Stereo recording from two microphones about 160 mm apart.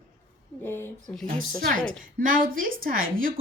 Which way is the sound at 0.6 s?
15° left (ahead or behind).